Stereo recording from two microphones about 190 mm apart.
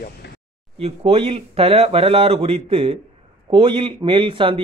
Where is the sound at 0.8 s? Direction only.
30° right (ahead or behind).